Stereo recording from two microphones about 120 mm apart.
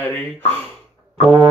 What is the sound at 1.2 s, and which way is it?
Music, 55° right (ahead or behind).